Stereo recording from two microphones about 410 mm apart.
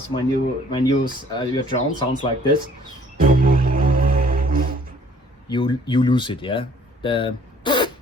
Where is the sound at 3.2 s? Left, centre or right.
Centre.